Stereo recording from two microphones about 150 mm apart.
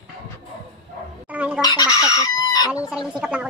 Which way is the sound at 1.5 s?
25° left (ahead or behind).